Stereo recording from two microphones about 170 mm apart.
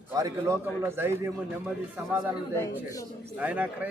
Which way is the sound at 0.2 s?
20° right (ahead or behind).